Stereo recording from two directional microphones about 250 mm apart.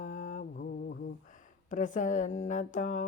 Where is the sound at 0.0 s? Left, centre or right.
Left.